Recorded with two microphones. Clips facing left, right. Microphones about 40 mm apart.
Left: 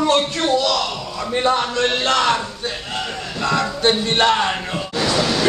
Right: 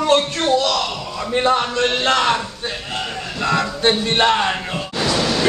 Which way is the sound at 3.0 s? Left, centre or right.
Centre.